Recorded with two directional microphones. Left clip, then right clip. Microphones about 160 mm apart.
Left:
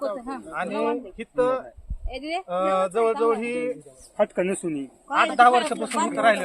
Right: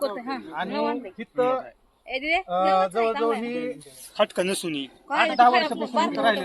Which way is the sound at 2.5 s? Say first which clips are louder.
Even; 20° left (ahead or behind).